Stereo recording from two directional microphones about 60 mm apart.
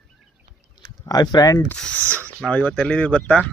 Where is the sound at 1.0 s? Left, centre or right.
Left.